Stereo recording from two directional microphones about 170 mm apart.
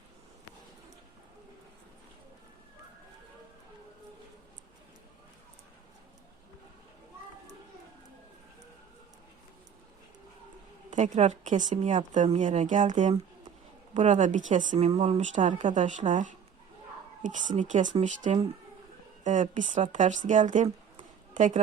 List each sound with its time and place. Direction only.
10.9 s a woman's voice: 45° right (ahead or behind)